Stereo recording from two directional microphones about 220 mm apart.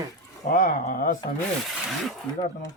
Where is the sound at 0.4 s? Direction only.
40° left (ahead or behind).